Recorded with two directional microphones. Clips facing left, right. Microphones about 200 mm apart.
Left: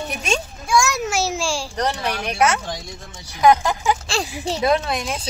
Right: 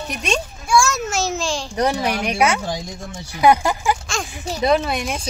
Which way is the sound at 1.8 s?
10° right (ahead or behind).